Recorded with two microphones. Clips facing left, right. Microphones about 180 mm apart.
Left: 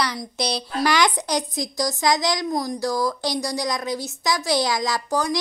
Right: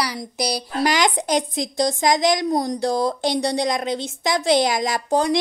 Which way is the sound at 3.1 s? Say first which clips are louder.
Right 4 dB; 25° right (ahead or behind).